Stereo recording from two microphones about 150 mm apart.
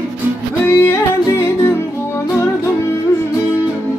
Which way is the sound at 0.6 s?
15° left (ahead or behind).